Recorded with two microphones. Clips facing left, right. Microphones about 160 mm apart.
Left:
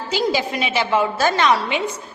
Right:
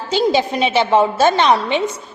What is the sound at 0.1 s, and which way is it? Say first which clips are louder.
A woman's voice: right 5 dB; 25° right (ahead or behind).